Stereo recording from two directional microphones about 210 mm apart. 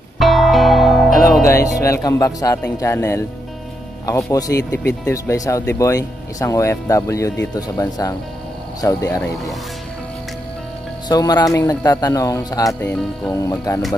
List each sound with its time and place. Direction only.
0.2 s music: centre (ahead or behind)
1.4 s music: 15° left (ahead or behind)
1.8 s speech: 15° left (ahead or behind)
4.3 s speech: 15° left (ahead or behind)
11.1 s speech: 20° left (ahead or behind)